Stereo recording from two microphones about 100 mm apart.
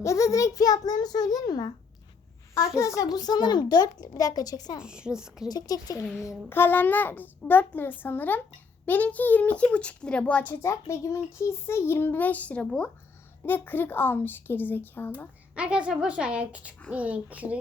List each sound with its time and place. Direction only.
0.0 s a child's voice: 30° left (ahead or behind)
4.8 s a woman's voice: 10° right (ahead or behind)
5.5 s a child's voice: 40° left (ahead or behind)
6.2 s a child's voice: 20° left (ahead or behind)
10.5 s a child's voice: 30° left (ahead or behind)
15.5 s a woman's voice: 10° right (ahead or behind)